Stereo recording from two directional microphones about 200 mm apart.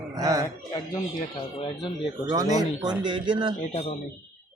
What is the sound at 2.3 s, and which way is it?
Speech, 15° right (ahead or behind).